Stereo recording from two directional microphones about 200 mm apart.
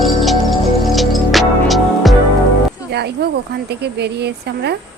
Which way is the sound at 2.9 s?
55° right (ahead or behind).